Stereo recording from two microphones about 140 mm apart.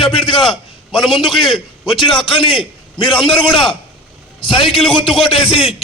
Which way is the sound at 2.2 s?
40° left (ahead or behind).